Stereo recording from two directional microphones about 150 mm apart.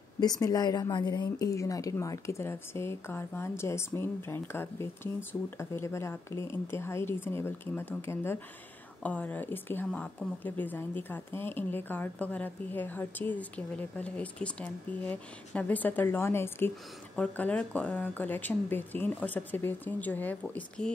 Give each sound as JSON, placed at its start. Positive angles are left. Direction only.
{"t": 0.2, "sound": "a woman's voice", "side_deg": 25}